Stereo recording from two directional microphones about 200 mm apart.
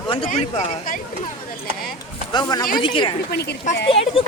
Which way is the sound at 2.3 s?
20° left (ahead or behind).